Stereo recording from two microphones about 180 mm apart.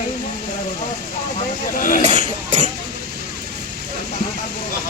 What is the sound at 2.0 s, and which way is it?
Speech, 40° right (ahead or behind).